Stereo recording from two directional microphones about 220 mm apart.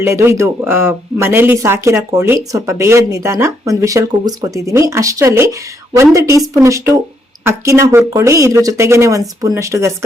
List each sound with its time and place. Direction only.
0.0 s speech: 10° right (ahead or behind)